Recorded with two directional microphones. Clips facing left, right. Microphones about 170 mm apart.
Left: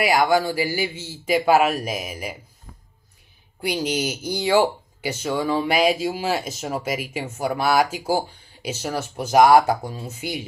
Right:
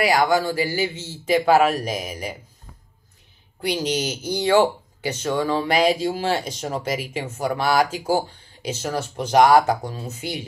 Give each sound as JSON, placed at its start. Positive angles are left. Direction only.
{"t": 0.0, "sound": "speech", "side_deg": 10}
{"t": 3.6, "sound": "speech", "side_deg": 10}